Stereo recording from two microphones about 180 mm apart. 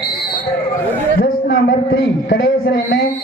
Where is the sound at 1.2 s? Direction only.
90° left.